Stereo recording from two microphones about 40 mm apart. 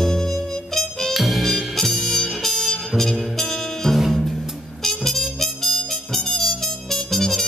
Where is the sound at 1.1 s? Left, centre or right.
Centre.